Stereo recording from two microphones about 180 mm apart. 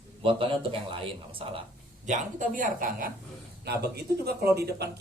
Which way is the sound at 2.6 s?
50° right (ahead or behind).